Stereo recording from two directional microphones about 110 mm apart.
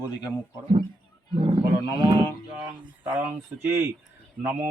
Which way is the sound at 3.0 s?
20° right (ahead or behind).